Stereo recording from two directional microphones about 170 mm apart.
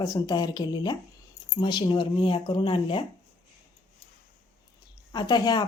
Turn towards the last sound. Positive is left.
turn(degrees=25)  # may be behind; listen again after turning